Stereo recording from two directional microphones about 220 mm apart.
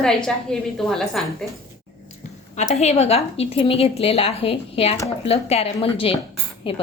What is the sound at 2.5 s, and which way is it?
Speech, 30° left (ahead or behind).